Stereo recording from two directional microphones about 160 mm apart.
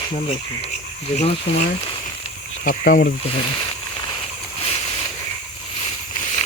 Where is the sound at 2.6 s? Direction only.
60° left (ahead or behind).